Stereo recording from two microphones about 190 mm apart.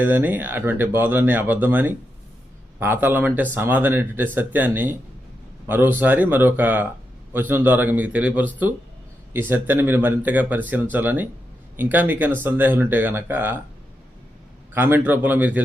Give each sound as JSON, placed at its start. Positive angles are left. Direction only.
{"t": 0.0, "sound": "speech", "side_deg": -10}
{"t": 14.7, "sound": "speech", "side_deg": -10}